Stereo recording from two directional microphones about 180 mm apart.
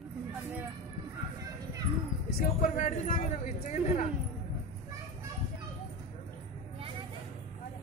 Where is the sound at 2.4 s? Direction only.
45° left (ahead or behind).